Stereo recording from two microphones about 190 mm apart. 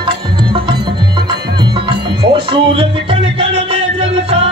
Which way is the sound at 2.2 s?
25° right (ahead or behind).